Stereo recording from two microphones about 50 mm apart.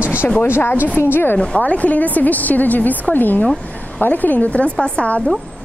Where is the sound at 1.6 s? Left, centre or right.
Left.